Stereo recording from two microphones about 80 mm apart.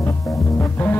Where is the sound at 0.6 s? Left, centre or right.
Left.